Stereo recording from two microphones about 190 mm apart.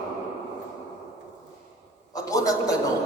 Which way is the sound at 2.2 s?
20° left (ahead or behind).